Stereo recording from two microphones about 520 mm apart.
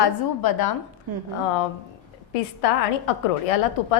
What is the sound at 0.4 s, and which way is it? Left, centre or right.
Speech, left.